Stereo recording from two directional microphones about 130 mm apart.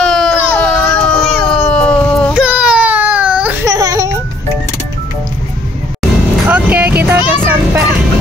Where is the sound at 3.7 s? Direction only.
25° right (ahead or behind).